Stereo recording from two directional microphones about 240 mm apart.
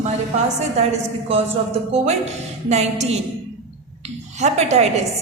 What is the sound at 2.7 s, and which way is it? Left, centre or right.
A woman's voice, right.